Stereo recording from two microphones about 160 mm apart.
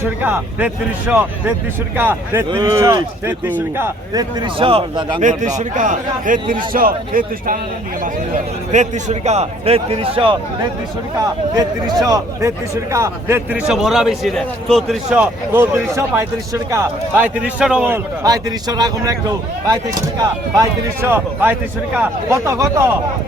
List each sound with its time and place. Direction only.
0.2 s a man's voice: 10° right (ahead or behind)
2.5 s speech: 25° right (ahead or behind)
5.2 s a man's voice: 50° right (ahead or behind)
8.7 s a man's voice: 45° right (ahead or behind)
12.0 s a man's voice: 20° right (ahead or behind)